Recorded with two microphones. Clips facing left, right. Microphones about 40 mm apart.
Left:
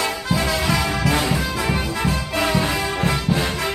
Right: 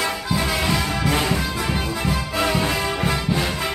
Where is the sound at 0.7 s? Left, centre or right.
Centre.